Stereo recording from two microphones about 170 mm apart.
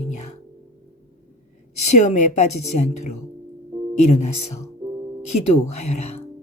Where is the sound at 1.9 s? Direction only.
45° left (ahead or behind).